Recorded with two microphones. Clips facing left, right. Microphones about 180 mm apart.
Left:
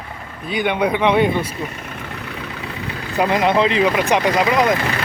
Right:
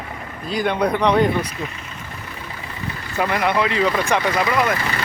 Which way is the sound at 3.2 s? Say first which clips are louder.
Left 4 dB; 20° left (ahead or behind).